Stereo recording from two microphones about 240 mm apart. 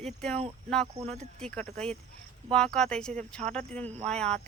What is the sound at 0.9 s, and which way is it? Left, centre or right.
Speech, right.